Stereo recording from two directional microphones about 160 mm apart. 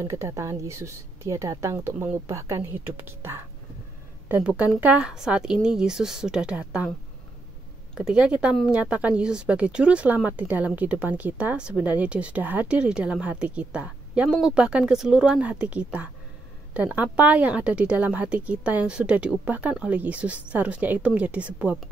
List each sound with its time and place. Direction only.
0.0 s a woman's voice: 20° right (ahead or behind)
7.9 s speech: 5° right (ahead or behind)